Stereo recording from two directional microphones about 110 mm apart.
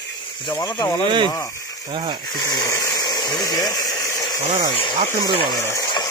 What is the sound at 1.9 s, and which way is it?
Speech, 40° right (ahead or behind).